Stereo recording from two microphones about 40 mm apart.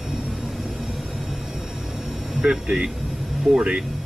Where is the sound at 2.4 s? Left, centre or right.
Right.